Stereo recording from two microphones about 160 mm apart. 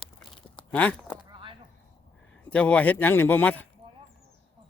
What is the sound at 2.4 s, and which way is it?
Speech, 10° left (ahead or behind).